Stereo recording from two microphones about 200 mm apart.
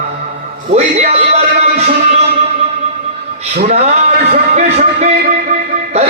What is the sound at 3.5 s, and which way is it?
Speech, 35° right (ahead or behind).